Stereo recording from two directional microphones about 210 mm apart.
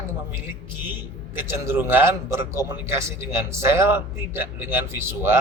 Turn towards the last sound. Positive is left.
turn(degrees=-10)  # may be behind; listen again after turning